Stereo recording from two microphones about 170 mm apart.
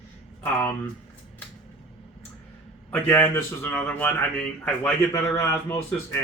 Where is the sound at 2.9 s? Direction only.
10° left (ahead or behind).